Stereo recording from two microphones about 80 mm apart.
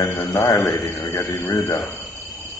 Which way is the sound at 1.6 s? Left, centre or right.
Left.